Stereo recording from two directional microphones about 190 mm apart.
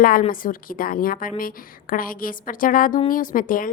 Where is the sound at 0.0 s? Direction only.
45° left (ahead or behind).